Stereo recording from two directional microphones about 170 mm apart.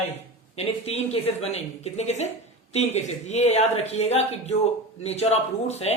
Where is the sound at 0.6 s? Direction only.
40° left (ahead or behind).